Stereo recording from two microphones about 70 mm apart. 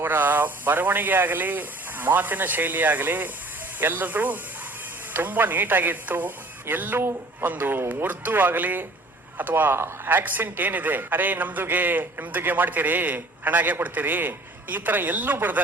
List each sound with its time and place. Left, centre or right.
0.0 s a man's voice: right